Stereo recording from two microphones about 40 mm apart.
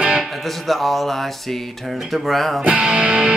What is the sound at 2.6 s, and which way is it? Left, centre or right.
Music, right.